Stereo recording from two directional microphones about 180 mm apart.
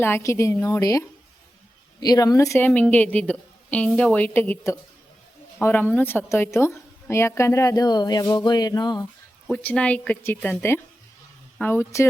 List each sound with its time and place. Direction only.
0.0 s a woman's voice: 15° left (ahead or behind)
9.5 s a woman's voice: 10° left (ahead or behind)